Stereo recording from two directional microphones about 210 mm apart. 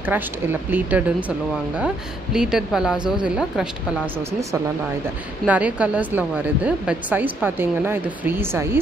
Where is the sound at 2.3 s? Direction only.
Centre (ahead or behind).